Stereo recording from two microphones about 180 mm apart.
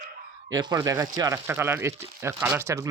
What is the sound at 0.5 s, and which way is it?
Speech, 20° right (ahead or behind).